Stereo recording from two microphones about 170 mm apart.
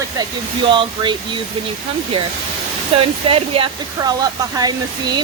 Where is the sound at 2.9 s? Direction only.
35° right (ahead or behind).